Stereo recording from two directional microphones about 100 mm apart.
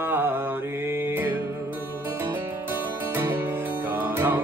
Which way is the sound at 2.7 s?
20° right (ahead or behind).